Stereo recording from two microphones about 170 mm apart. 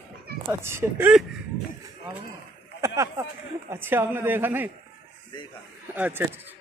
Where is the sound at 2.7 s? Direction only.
15° right (ahead or behind).